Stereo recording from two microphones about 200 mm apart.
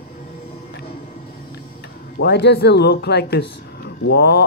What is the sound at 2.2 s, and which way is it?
Speech, 55° left (ahead or behind).